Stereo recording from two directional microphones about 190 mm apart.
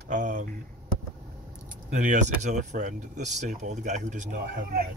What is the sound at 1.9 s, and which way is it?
A man's voice, 40° right (ahead or behind).